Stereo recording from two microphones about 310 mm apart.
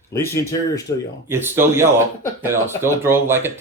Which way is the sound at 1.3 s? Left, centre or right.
Centre.